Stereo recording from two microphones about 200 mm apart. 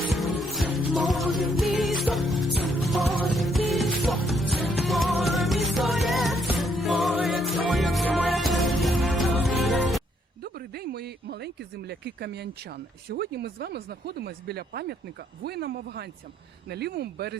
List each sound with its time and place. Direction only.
0.2 s music: centre (ahead or behind)
10.4 s a sound: 50° right (ahead or behind)
13.1 s speech: 50° right (ahead or behind)